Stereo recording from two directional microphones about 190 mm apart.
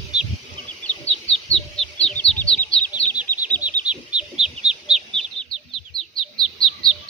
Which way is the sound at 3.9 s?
5° right (ahead or behind).